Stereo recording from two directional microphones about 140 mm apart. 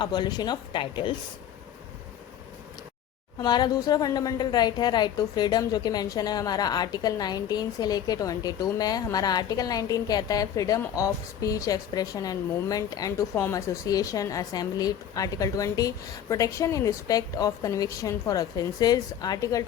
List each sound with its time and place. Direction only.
0.0 s speech: 30° left (ahead or behind)
3.3 s a woman's voice: 30° left (ahead or behind)